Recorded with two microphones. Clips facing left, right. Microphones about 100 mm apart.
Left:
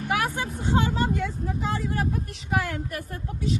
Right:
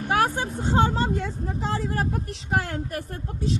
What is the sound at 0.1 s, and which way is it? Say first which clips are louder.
Speech: right 4 dB; 35° right (ahead or behind).